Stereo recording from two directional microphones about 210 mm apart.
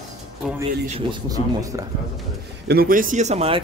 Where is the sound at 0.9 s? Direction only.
20° right (ahead or behind).